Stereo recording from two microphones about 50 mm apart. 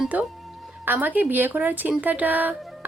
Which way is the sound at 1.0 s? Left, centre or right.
Right.